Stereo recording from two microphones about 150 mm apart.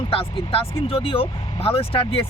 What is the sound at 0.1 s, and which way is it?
Speech, 40° left (ahead or behind).